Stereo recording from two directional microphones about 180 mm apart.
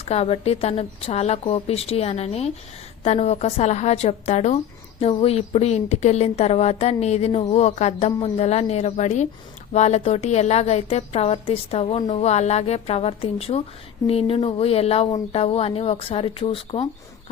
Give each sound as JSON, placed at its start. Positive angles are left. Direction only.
{"t": 0.0, "sound": "a woman's voice", "side_deg": 35}